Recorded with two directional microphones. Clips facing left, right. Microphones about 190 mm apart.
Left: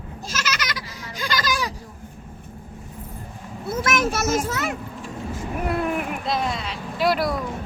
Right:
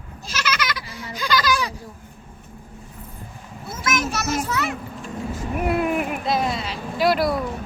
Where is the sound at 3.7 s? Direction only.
60° left (ahead or behind).